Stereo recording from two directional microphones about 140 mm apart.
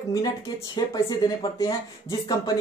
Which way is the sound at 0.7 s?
30° left (ahead or behind).